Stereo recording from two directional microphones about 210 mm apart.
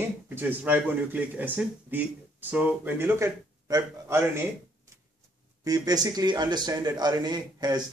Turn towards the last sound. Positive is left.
turn(degrees=-20)  # may be behind; listen again after turning